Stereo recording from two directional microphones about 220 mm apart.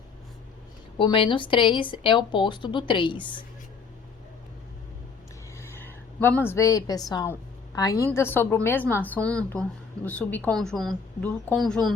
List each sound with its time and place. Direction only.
0.9 s a woman's voice: 25° left (ahead or behind)
5.5 s a woman's voice: 10° left (ahead or behind)